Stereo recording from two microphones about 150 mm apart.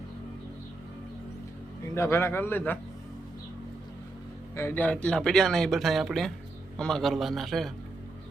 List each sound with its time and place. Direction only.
2.0 s a man's voice: 15° left (ahead or behind)
4.5 s speech: 15° left (ahead or behind)